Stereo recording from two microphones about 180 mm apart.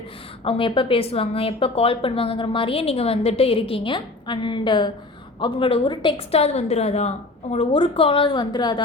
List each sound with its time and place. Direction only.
0.4 s a woman's voice: 30° left (ahead or behind)